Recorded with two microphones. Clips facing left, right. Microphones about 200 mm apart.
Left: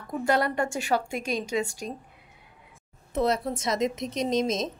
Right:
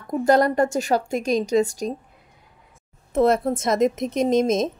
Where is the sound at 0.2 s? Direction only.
40° right (ahead or behind).